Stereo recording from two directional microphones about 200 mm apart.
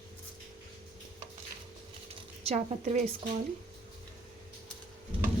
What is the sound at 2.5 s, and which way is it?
Speech, 35° right (ahead or behind).